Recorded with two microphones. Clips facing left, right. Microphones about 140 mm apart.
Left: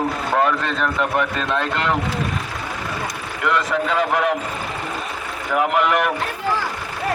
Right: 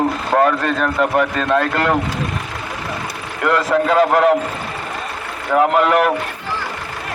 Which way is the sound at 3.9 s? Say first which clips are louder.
Right 7 dB; 55° right (ahead or behind).